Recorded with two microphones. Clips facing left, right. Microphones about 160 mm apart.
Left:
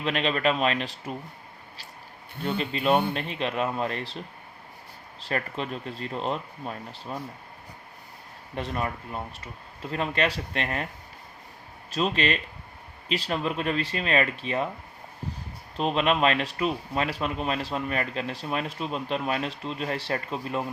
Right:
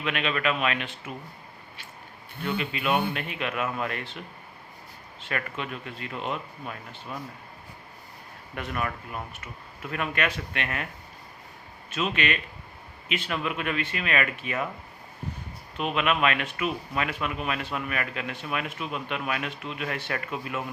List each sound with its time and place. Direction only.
0.0 s speech: 35° left (ahead or behind)
2.4 s speech: 35° left (ahead or behind)
5.2 s speech: 35° left (ahead or behind)
8.5 s speech: 30° left (ahead or behind)
11.9 s speech: 35° left (ahead or behind)
15.8 s speech: 30° left (ahead or behind)